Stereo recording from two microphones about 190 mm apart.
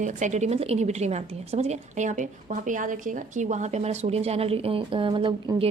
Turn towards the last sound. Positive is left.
turn(degrees=-25)  # may be behind; listen again after turning